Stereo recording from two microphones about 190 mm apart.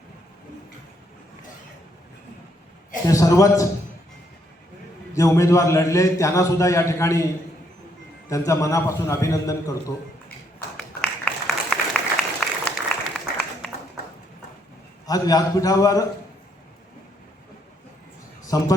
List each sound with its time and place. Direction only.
3.1 s a man's voice: 15° left (ahead or behind)
5.1 s a man's voice: 15° left (ahead or behind)
8.3 s a man's voice: 15° left (ahead or behind)
10.8 s applause: 5° left (ahead or behind)
15.0 s a man's voice: 20° left (ahead or behind)
18.5 s a man's voice: 20° left (ahead or behind)